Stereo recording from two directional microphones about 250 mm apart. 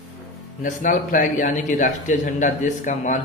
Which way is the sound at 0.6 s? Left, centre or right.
Left.